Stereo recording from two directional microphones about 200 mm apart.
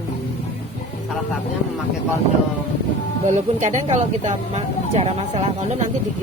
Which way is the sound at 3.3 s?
35° right (ahead or behind).